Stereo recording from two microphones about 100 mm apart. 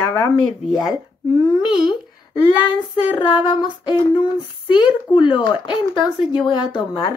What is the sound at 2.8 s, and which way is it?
A woman's voice, 50° left (ahead or behind).